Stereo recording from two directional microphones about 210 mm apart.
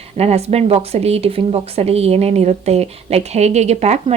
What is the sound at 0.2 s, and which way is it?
Speech, 30° right (ahead or behind).